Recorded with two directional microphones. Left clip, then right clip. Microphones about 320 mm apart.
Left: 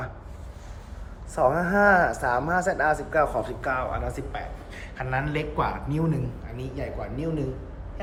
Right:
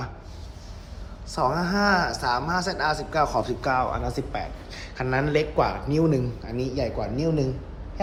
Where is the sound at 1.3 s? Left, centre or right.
Centre.